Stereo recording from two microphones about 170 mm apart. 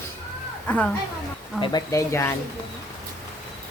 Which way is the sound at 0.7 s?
10° left (ahead or behind).